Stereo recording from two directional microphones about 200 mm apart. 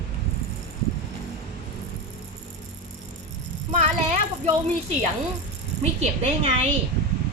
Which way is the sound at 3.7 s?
35° right (ahead or behind).